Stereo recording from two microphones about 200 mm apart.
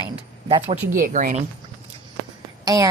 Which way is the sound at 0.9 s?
40° right (ahead or behind).